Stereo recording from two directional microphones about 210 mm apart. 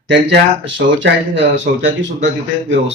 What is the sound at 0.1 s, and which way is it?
Speech, 60° right (ahead or behind).